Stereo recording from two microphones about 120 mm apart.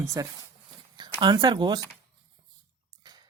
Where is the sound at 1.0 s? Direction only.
40° right (ahead or behind).